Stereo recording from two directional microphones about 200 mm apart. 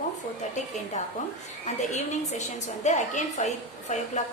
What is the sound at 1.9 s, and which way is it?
A woman's voice, 35° left (ahead or behind).